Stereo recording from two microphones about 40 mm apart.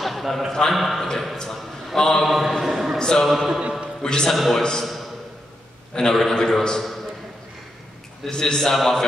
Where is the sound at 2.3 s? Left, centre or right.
Centre.